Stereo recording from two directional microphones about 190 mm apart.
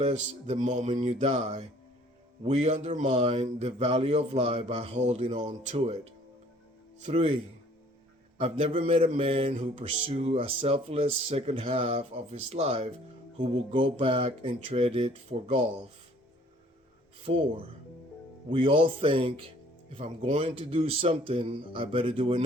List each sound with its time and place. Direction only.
0.0 s speech: 35° right (ahead or behind)
7.0 s speech: 35° right (ahead or behind)
8.4 s speech: 30° right (ahead or behind)
17.2 s a man's voice: 30° right (ahead or behind)